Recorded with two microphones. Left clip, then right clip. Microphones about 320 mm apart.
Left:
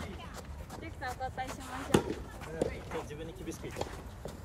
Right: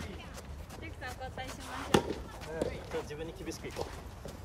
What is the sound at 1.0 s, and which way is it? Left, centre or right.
Vehicle, centre.